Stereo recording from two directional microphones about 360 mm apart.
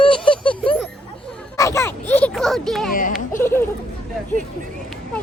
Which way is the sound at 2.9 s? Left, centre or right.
Left.